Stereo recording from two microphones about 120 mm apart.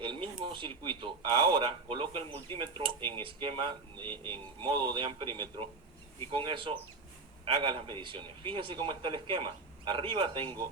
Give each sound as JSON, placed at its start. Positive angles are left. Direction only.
{"t": 0.0, "sound": "a man's voice", "side_deg": -45}
{"t": 4.1, "sound": "speech", "side_deg": 15}
{"t": 4.6, "sound": "a man's voice", "side_deg": -45}